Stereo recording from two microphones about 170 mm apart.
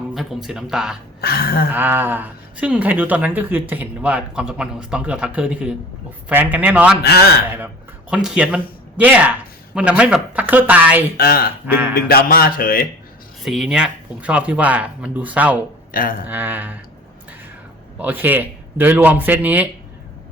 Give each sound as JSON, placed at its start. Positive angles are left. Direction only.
{"t": 0.1, "sound": "speech", "side_deg": 0}
{"t": 1.2, "sound": "speech", "side_deg": 65}
{"t": 1.7, "sound": "speech", "side_deg": -10}
{"t": 8.1, "sound": "speech", "side_deg": -5}
{"t": 11.2, "sound": "speech", "side_deg": 60}
{"t": 11.6, "sound": "speech", "side_deg": -10}
{"t": 11.9, "sound": "speech", "side_deg": 60}
{"t": 13.4, "sound": "speech", "side_deg": 0}
{"t": 15.9, "sound": "a sound", "side_deg": 55}
{"t": 16.2, "sound": "speech", "side_deg": -10}
{"t": 17.9, "sound": "speech", "side_deg": -10}